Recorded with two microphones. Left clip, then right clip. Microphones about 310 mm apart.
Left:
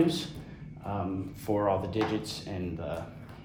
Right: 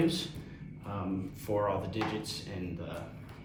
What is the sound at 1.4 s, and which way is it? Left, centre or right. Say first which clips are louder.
Speech: left 4 dB; left.